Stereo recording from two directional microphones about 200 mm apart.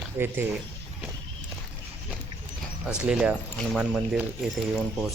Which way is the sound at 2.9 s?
5° right (ahead or behind).